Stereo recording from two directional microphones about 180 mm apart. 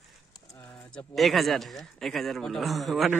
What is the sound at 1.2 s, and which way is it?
A man's voice, centre (ahead or behind).